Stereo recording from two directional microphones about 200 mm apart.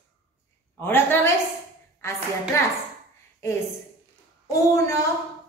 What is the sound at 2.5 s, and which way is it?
Speech, 15° left (ahead or behind).